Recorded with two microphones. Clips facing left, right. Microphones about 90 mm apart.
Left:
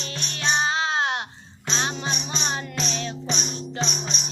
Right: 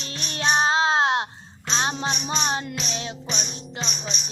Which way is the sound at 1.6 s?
30° right (ahead or behind).